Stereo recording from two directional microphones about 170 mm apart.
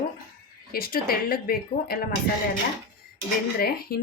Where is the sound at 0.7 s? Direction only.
60° left (ahead or behind).